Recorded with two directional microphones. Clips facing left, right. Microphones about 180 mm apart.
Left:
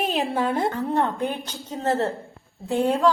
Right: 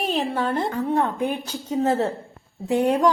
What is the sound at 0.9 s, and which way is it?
A woman's voice, 10° right (ahead or behind).